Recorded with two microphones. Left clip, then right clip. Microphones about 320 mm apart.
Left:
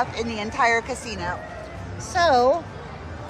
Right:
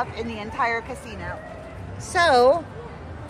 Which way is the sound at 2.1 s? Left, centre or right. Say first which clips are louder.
Right 1 dB; right.